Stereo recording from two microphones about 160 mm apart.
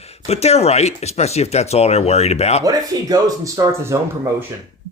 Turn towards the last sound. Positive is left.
turn(degrees=-20)  # may be behind; listen again after turning